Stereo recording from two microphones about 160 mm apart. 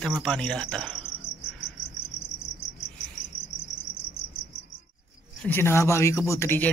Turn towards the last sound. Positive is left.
turn(degrees=15)  # may be behind; listen again after turning